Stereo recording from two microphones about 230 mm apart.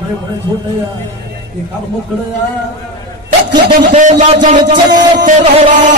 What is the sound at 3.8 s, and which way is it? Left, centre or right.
A man's voice, right.